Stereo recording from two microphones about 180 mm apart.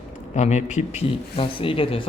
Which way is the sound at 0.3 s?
40° left (ahead or behind).